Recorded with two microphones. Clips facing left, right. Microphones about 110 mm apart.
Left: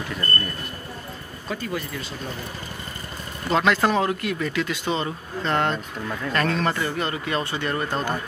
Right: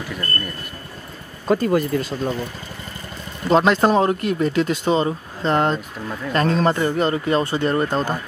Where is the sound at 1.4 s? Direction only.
45° right (ahead or behind).